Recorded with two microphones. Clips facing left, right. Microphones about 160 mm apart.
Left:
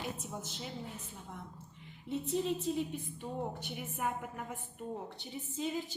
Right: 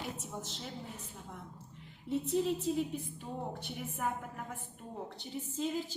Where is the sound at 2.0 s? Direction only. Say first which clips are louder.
Right 2 dB; centre (ahead or behind).